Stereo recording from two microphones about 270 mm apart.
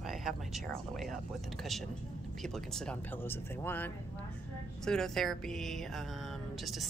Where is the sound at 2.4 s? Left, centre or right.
Centre.